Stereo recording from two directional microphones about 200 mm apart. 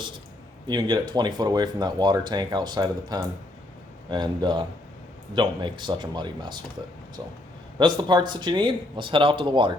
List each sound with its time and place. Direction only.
0.7 s speech: 20° right (ahead or behind)